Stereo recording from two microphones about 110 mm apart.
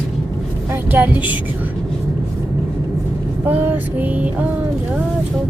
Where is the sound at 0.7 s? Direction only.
15° right (ahead or behind).